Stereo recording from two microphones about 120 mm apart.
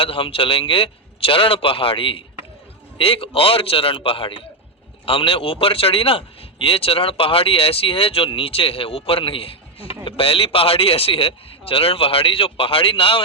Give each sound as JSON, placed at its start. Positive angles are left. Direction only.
{"t": 0.0, "sound": "speech", "side_deg": 50}